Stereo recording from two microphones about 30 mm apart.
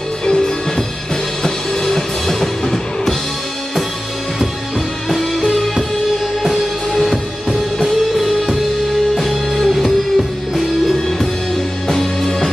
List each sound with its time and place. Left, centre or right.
0.2 s music: left
1.4 s music: centre
5.1 s music: centre
9.1 s music: centre
11.9 s music: centre